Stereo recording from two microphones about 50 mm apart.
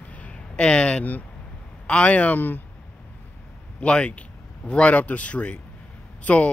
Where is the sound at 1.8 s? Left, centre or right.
Left.